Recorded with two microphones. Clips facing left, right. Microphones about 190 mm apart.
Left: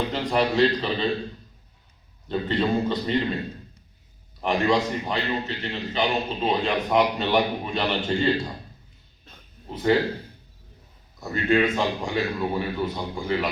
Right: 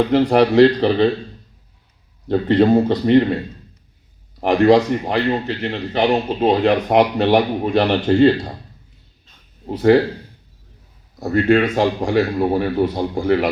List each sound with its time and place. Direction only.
0.1 s a man's voice: 70° right (ahead or behind)
2.2 s a man's voice: 70° right (ahead or behind)
4.4 s a man's voice: 65° right (ahead or behind)
9.6 s a man's voice: 65° right (ahead or behind)
11.2 s a man's voice: 70° right (ahead or behind)